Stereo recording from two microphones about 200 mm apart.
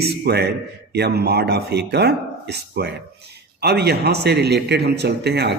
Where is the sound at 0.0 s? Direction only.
55° right (ahead or behind).